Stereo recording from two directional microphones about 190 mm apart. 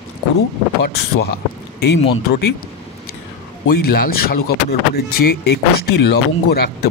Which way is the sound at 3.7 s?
55° left (ahead or behind).